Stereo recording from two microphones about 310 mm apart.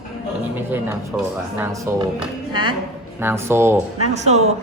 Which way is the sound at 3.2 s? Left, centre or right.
Centre.